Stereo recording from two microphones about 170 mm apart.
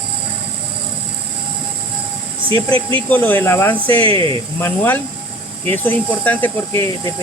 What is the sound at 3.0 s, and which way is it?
Speech, 10° left (ahead or behind).